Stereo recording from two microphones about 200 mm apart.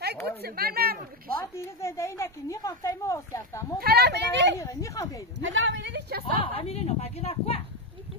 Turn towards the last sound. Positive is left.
turn(degrees=30)  # may be behind; listen again after turning